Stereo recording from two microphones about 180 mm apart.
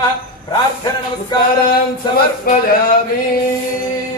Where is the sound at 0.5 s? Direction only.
20° left (ahead or behind).